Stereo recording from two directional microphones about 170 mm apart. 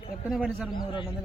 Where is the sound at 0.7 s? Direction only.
30° left (ahead or behind).